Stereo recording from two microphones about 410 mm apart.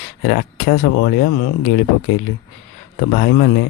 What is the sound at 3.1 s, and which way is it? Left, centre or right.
Speech, left.